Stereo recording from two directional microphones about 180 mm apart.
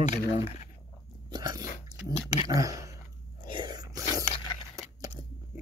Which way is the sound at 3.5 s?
25° right (ahead or behind).